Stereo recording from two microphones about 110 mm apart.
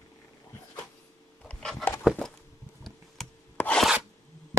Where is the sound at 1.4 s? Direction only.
5° left (ahead or behind).